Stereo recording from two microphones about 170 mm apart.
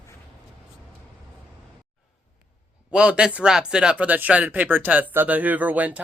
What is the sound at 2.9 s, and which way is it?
Speech, 5° right (ahead or behind).